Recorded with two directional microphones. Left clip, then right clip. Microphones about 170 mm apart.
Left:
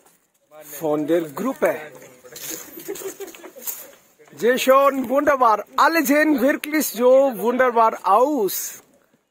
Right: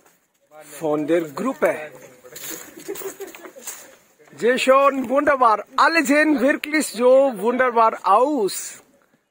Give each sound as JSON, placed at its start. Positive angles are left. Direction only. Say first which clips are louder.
{"t": 0.7, "sound": "a man's voice", "louder": "even", "side_deg": 5}
{"t": 2.3, "sound": "a sound", "louder": "left 1 dB", "side_deg": -40}
{"t": 4.4, "sound": "a man's voice", "louder": "even", "side_deg": 10}